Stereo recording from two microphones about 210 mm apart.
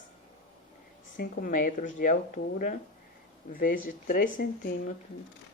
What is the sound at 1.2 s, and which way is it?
Speech, 40° left (ahead or behind).